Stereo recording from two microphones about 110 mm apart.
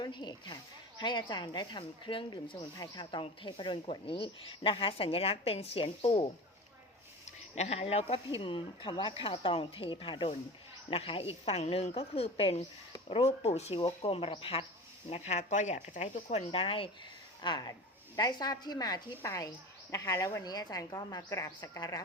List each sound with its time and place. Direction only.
0.0 s speech: 45° left (ahead or behind)
2.7 s a woman's voice: 35° left (ahead or behind); by 6.3 s 60° left (ahead or behind)
7.3 s speech: 90° left; by 8.2 s 60° left (ahead or behind)
8.4 s a woman's voice: 50° left (ahead or behind)
13.1 s speech: 75° left (ahead or behind)
13.7 s a woman's voice: 60° left (ahead or behind)
15.1 s speech: 85° left; by 16.9 s 60° left (ahead or behind)
17.4 s speech: 40° left (ahead or behind)